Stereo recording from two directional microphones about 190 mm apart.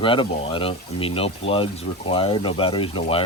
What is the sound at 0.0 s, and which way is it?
Speech, 25° left (ahead or behind).